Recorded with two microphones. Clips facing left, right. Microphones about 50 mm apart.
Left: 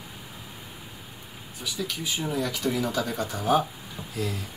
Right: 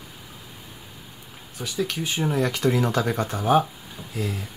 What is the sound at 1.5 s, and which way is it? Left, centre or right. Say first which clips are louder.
Speech: right 5 dB; right.